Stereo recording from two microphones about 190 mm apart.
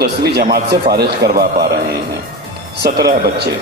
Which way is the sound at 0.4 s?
55° right (ahead or behind).